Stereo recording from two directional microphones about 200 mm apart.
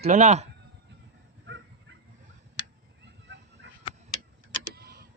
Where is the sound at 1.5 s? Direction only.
60° right (ahead or behind).